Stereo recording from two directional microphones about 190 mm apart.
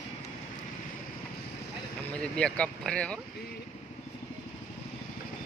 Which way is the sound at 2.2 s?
5° left (ahead or behind).